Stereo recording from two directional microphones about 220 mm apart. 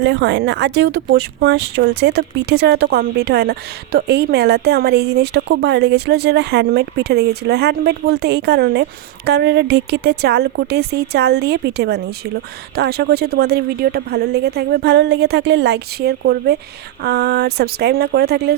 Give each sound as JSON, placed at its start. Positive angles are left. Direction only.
{"t": 0.0, "sound": "speech", "side_deg": -50}